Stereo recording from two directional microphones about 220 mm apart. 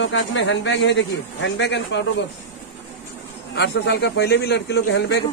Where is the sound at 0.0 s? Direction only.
60° left (ahead or behind).